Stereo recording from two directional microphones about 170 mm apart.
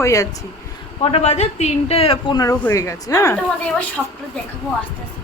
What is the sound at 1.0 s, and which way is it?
A woman's voice, 35° left (ahead or behind).